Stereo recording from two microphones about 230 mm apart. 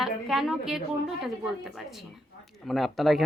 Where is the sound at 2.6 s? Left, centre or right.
Centre.